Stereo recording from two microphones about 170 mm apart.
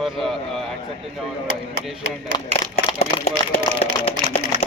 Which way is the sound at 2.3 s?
25° left (ahead or behind).